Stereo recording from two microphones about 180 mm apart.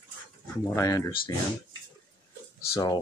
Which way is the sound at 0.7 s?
20° left (ahead or behind).